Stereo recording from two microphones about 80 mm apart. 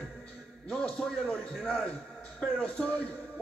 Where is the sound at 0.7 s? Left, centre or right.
Centre.